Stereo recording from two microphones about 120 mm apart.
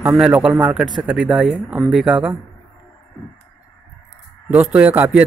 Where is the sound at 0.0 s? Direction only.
10° right (ahead or behind).